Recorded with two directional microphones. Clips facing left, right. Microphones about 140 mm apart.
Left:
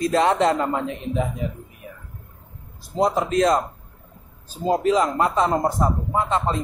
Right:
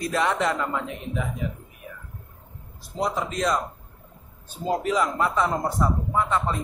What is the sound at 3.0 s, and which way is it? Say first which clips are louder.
Speech: left 7 dB; 45° left (ahead or behind).